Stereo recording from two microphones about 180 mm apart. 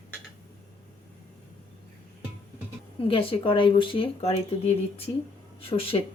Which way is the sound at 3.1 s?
30° left (ahead or behind).